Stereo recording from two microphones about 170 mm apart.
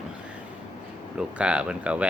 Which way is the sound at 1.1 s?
5° right (ahead or behind).